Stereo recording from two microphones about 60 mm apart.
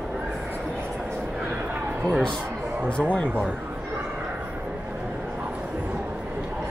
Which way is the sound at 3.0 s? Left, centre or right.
Centre.